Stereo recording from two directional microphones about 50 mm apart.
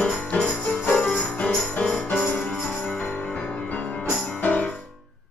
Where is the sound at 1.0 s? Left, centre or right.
Centre.